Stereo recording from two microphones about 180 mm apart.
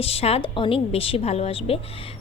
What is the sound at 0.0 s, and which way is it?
A woman's voice, 35° left (ahead or behind).